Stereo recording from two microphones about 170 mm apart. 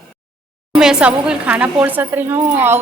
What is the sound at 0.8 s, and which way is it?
A woman's voice, 5° right (ahead or behind).